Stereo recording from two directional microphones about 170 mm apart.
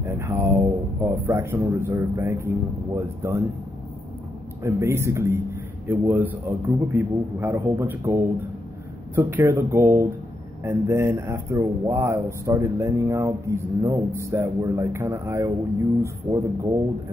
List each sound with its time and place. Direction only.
0.0 s speech: 10° right (ahead or behind)
4.6 s speech: 15° right (ahead or behind)